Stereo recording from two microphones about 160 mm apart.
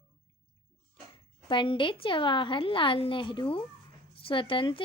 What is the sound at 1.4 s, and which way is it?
A woman's voice, 30° left (ahead or behind).